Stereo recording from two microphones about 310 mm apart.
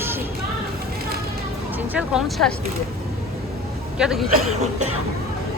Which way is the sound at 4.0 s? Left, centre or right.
Centre.